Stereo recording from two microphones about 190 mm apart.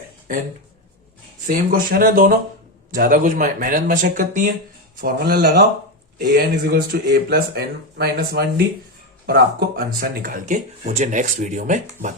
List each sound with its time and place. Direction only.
1.5 s speech: 50° right (ahead or behind)